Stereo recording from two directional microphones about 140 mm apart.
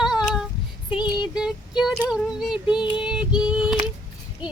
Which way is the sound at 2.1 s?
5° right (ahead or behind).